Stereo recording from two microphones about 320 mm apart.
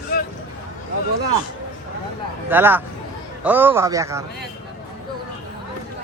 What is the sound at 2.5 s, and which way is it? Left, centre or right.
A man's voice, centre.